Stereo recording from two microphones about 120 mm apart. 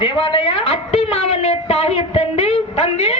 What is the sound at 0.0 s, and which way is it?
A woman's voice, 50° left (ahead or behind).